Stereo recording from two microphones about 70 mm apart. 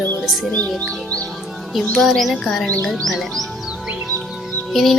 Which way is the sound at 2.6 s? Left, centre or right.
Left.